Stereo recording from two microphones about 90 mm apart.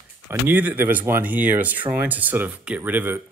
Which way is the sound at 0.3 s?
20° right (ahead or behind).